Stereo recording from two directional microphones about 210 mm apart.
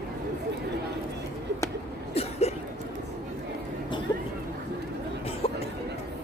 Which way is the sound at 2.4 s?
30° left (ahead or behind).